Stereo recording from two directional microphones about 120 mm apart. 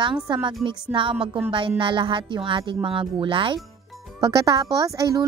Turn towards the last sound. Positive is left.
turn(degrees=-30)  # may be behind; listen again after turning